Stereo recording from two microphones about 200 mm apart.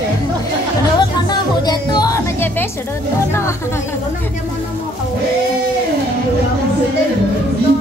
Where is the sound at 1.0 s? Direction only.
20° left (ahead or behind).